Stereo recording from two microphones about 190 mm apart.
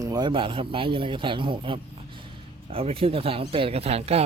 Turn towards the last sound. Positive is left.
turn(degrees=-30)  # may be behind; listen again after turning